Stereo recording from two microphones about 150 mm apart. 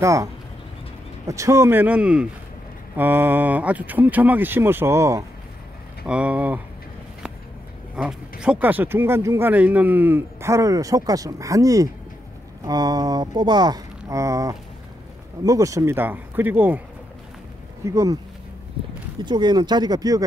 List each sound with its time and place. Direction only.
0.0 s speech: 20° right (ahead or behind)
6.0 s speech: 10° right (ahead or behind)
7.9 s speech: 5° right (ahead or behind)
17.8 s speech: 20° right (ahead or behind)
19.2 s speech: 30° right (ahead or behind)